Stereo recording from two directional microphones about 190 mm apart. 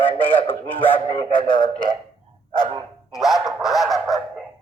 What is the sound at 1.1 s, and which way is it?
Speech, 25° left (ahead or behind).